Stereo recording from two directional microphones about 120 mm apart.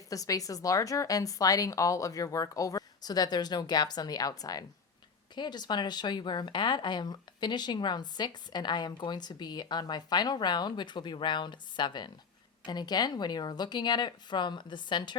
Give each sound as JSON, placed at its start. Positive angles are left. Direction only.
{"t": 0.1, "sound": "a woman's voice", "side_deg": 30}